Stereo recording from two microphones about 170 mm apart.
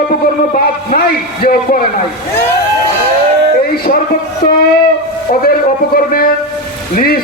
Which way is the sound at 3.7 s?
60° left (ahead or behind).